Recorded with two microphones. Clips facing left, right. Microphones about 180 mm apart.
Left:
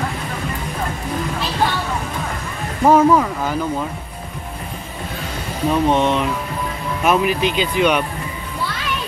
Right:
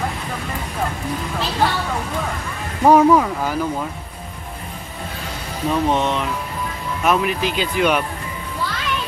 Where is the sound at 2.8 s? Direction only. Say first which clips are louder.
Even; 15° right (ahead or behind).